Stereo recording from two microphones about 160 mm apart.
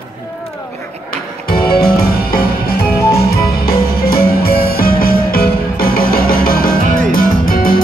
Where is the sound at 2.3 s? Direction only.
70° left (ahead or behind).